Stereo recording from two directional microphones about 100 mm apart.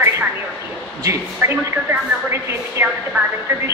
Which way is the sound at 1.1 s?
25° right (ahead or behind).